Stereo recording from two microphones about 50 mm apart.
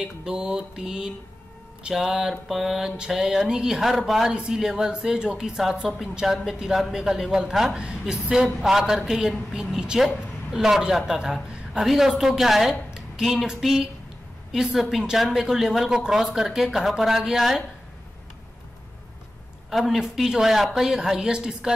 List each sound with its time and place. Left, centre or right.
0.0 s a woman's voice: centre
11.8 s a sound: centre
14.5 s a woman's voice: centre
19.9 s a woman's voice: centre